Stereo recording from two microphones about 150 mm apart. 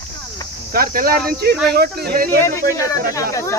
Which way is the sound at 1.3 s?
90° right.